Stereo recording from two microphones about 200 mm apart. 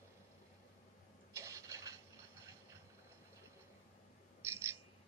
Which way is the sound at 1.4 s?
15° right (ahead or behind).